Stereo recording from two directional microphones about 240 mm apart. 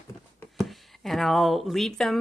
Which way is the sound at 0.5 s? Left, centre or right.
Centre.